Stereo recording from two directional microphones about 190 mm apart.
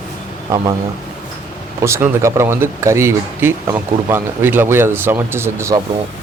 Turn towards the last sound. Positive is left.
turn(degrees=-15)  # may be behind; listen again after turning